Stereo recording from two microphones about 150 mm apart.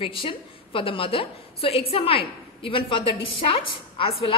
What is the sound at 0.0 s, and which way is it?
A woman's voice, 35° left (ahead or behind).